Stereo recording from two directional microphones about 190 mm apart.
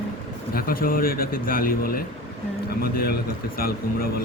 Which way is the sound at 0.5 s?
50° left (ahead or behind).